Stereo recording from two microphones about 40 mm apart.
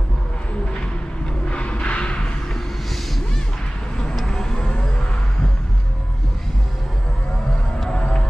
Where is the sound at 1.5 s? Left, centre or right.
Left.